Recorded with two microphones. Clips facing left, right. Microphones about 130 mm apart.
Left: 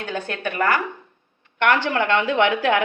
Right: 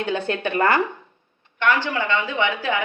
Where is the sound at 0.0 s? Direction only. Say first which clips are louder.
Right 3 dB; 25° right (ahead or behind).